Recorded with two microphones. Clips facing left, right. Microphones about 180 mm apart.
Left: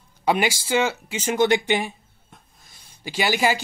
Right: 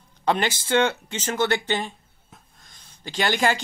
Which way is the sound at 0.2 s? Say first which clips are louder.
Left 2 dB; 10° left (ahead or behind).